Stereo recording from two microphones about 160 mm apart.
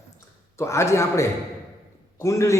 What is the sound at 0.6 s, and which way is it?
A man's voice, 15° left (ahead or behind).